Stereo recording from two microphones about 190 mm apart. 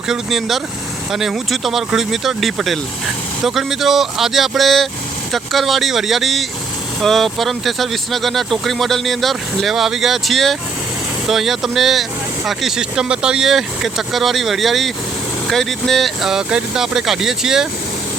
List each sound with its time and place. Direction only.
0.1 s speech: centre (ahead or behind)